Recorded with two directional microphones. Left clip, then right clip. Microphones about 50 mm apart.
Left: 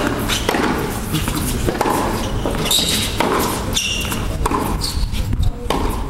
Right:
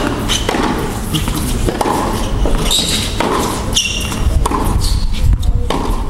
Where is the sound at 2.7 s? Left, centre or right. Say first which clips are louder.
Right 2 dB; left.